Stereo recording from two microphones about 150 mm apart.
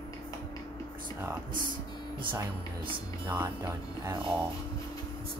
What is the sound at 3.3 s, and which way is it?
Speech, 15° right (ahead or behind).